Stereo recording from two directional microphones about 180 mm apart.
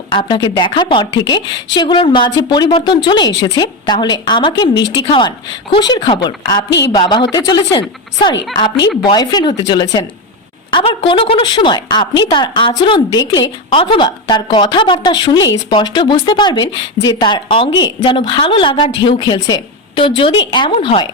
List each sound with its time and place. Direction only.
0.1 s a woman's voice: 25° left (ahead or behind)
6.7 s a woman's voice: 75° left (ahead or behind)
6.9 s a woman's voice: 25° left (ahead or behind)